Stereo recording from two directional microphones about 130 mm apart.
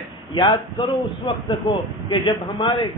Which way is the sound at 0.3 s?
40° left (ahead or behind).